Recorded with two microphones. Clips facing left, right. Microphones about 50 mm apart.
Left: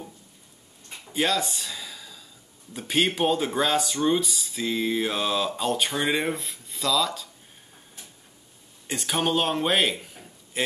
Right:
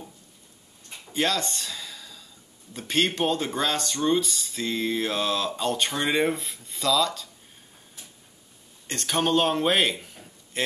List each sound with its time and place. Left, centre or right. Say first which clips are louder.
1.0 s a sound: left 1 dB; centre
2.7 s speech: left 1 dB; centre
8.8 s a man's voice: even; centre